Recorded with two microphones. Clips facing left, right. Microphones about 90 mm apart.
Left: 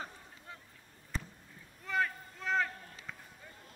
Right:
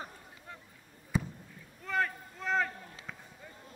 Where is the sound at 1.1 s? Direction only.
10° right (ahead or behind).